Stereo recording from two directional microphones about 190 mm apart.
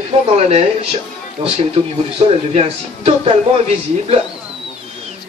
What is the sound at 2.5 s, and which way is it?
Speech, 30° right (ahead or behind).